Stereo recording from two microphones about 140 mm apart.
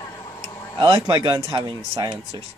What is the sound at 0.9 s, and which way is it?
Speech, 25° right (ahead or behind).